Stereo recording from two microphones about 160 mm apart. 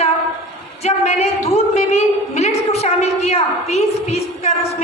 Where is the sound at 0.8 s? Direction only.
45° left (ahead or behind).